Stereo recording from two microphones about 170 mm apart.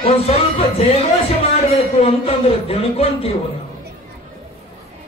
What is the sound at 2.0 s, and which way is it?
A man's voice, 35° left (ahead or behind).